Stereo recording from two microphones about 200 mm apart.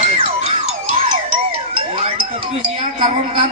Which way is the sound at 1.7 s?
30° right (ahead or behind).